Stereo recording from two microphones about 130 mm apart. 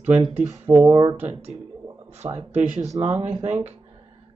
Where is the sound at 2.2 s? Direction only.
35° right (ahead or behind).